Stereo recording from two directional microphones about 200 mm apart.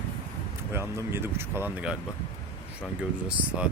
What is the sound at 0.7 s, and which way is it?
Speech, 15° right (ahead or behind).